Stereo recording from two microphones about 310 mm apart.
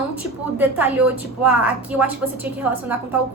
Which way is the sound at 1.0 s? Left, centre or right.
Right.